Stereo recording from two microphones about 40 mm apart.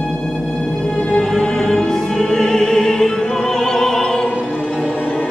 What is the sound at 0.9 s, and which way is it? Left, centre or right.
Music, centre.